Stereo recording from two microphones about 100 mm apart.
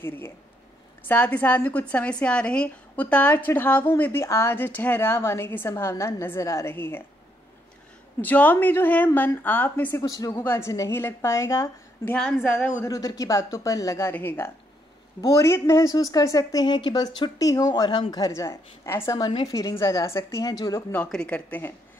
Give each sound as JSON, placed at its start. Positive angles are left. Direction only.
{"t": 1.0, "sound": "a woman's voice", "side_deg": 15}
{"t": 8.2, "sound": "a woman's voice", "side_deg": 15}
{"t": 10.0, "sound": "a woman's voice", "side_deg": 35}
{"t": 12.8, "sound": "a woman's voice", "side_deg": 35}
{"t": 14.1, "sound": "a woman's voice", "side_deg": 20}
{"t": 18.1, "sound": "a woman's voice", "side_deg": 35}
{"t": 19.1, "sound": "a woman's voice", "side_deg": 45}
{"t": 19.7, "sound": "a woman's voice", "side_deg": 30}
{"t": 20.5, "sound": "a woman's voice", "side_deg": 40}
{"t": 21.1, "sound": "speech", "side_deg": 10}